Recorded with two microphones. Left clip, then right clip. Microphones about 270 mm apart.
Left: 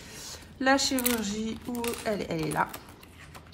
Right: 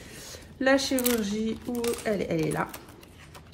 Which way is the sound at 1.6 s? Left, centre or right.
Centre.